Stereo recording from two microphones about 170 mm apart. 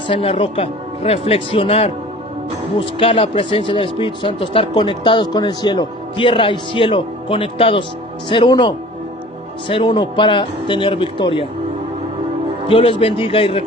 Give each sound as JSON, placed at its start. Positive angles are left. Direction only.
{"t": 0.1, "sound": "speech", "side_deg": 35}
{"t": 12.6, "sound": "speech", "side_deg": 35}